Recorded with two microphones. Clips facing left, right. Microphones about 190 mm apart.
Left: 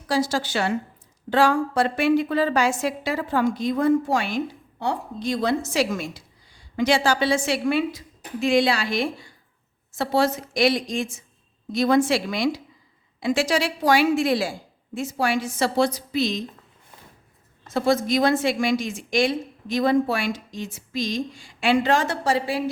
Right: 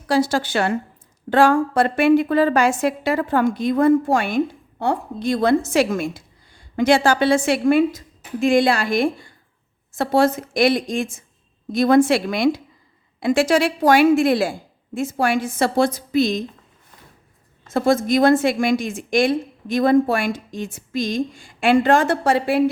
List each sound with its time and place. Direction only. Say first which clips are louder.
0.1 s a woman's voice: right 4 dB; 60° right (ahead or behind)
17.7 s a woman's voice: right 3 dB; 50° right (ahead or behind)